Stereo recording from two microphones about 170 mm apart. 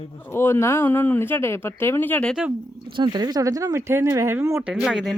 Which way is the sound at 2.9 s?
25° right (ahead or behind).